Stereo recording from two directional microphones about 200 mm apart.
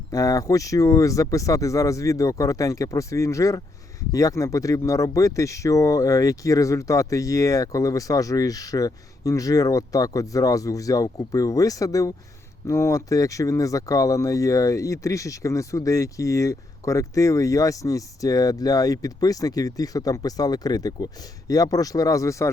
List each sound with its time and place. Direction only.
0.1 s speech: 15° left (ahead or behind)